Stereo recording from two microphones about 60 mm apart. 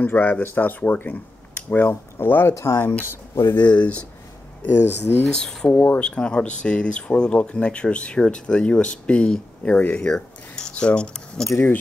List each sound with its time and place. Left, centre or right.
0.0 s speech: left
2.5 s speech: left
2.8 s speech: left
3.6 s speech: left
4.6 s speech: left
5.3 s speech: centre